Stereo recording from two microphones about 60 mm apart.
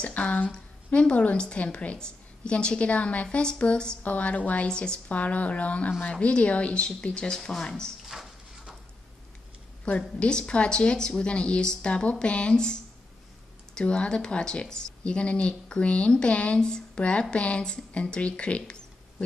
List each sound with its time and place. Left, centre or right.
0.0 s a woman's voice: left
8.1 s clip-clop: centre
9.8 s speech: centre